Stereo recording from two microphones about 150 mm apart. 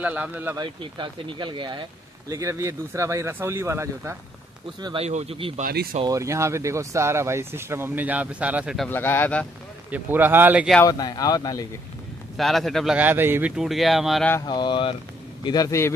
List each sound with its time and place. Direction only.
0.0 s speech: 10° right (ahead or behind)
0.6 s speech: 30° right (ahead or behind)
4.8 s speech: 40° right (ahead or behind)
5.6 s speech: 85° right
6.0 s speech: 20° right (ahead or behind)
8.7 s speech: 10° left (ahead or behind)
9.8 s speech: 10° right (ahead or behind)
10.8 s speech: 25° left (ahead or behind)
12.4 s speech: centre (ahead or behind)
13.6 s speech: centre (ahead or behind)
14.4 s speech: 30° left (ahead or behind)